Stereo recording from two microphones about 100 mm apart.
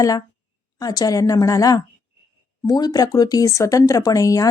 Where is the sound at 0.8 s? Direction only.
40° left (ahead or behind).